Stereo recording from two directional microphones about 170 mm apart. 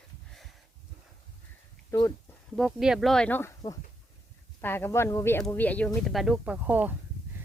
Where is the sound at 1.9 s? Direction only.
20° left (ahead or behind).